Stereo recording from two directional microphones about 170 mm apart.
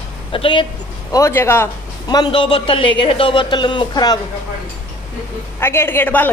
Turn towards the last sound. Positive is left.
turn(degrees=10)  # may be behind; listen again after turning